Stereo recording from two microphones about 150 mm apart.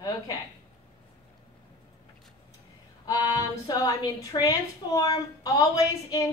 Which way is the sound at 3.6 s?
25° left (ahead or behind).